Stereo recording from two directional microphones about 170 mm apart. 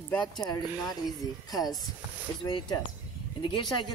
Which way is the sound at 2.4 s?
25° left (ahead or behind).